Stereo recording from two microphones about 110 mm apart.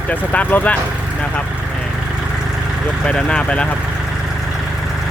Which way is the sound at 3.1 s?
10° left (ahead or behind).